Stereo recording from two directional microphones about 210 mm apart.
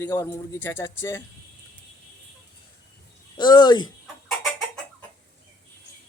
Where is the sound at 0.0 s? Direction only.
10° left (ahead or behind).